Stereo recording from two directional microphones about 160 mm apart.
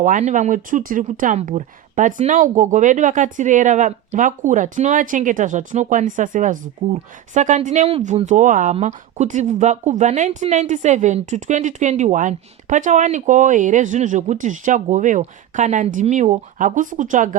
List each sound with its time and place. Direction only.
0.0 s speech: 50° right (ahead or behind)